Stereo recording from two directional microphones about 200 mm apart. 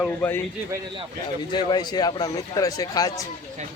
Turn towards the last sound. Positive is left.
turn(degrees=20)  # may be behind; listen again after turning